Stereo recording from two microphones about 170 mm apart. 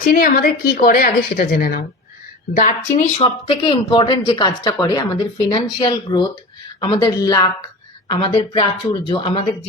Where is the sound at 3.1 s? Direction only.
30° left (ahead or behind).